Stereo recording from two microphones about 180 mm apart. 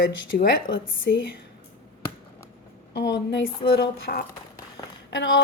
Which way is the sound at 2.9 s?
75° left (ahead or behind).